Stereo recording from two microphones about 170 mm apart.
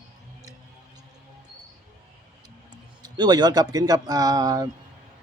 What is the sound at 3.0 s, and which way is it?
Speech, 25° right (ahead or behind).